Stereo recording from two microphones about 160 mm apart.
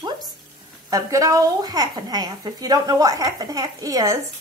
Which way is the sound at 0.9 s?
20° right (ahead or behind).